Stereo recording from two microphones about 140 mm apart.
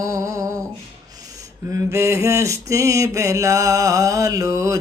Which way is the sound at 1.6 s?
20° right (ahead or behind).